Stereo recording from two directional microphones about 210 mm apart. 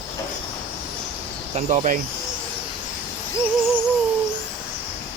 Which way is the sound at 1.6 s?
35° right (ahead or behind).